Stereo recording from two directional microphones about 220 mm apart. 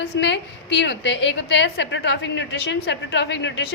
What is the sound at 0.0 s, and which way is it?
A woman's voice, 50° left (ahead or behind).